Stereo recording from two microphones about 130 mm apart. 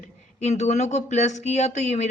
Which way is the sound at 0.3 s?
60° left (ahead or behind).